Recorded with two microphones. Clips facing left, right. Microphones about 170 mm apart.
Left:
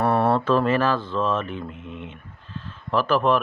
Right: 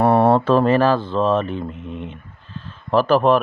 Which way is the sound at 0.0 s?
25° right (ahead or behind).